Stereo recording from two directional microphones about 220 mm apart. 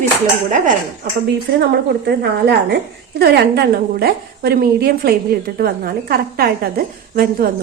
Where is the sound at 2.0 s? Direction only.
50° right (ahead or behind).